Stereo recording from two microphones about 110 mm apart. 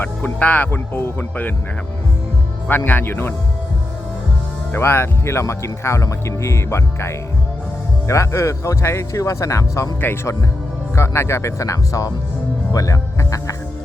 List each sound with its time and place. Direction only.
0.0 s speech: 15° left (ahead or behind)
2.6 s speech: 20° left (ahead or behind)
4.7 s speech: 20° left (ahead or behind)
10.0 s speech: 20° left (ahead or behind)
12.7 s music: 30° left (ahead or behind)